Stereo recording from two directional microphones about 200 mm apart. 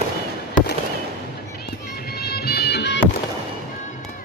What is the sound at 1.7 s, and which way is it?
Music, 50° left (ahead or behind).